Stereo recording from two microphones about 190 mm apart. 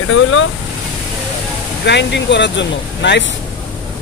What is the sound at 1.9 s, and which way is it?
Speech, 65° left (ahead or behind).